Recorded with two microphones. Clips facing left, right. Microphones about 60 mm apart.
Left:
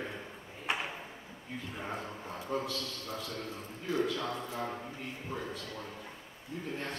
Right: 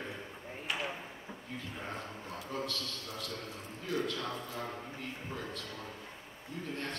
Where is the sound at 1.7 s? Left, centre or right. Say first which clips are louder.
Left 4 dB; centre.